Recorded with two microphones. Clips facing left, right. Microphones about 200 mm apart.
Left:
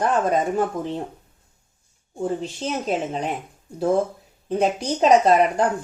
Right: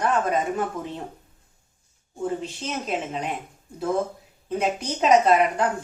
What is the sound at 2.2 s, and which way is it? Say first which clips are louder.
Speech: left 3 dB; 35° left (ahead or behind).